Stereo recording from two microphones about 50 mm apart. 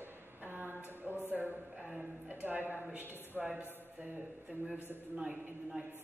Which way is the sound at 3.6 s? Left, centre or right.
Left.